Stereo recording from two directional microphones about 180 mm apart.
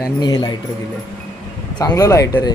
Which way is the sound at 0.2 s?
25° left (ahead or behind).